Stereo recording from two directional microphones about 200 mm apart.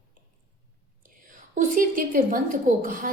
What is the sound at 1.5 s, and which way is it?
A woman's voice, 40° right (ahead or behind).